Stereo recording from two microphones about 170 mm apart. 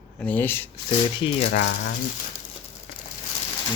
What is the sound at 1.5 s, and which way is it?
Speech, 90° left.